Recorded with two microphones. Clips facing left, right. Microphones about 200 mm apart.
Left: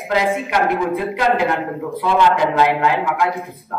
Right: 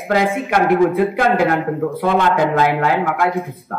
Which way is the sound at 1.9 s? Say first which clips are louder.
Left 1 dB; 50° right (ahead or behind).